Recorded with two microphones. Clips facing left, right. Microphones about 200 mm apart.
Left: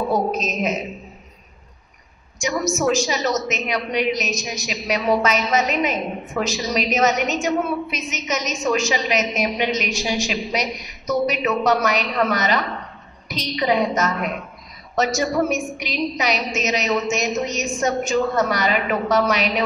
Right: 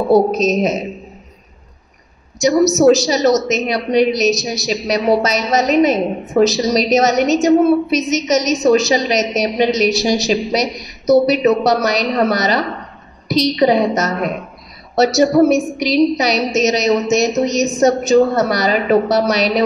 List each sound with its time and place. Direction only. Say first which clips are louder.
0.1 s a woman's voice: right 9 dB; 40° right (ahead or behind)
2.3 s a woman's voice: right 10 dB; 40° right (ahead or behind)